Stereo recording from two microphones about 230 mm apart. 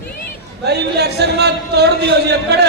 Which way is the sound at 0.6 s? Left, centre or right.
Right.